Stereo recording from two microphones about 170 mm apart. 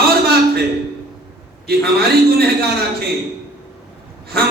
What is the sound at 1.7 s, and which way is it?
Speech, 65° right (ahead or behind).